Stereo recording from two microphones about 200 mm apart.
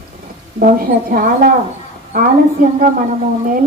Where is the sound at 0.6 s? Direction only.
45° right (ahead or behind).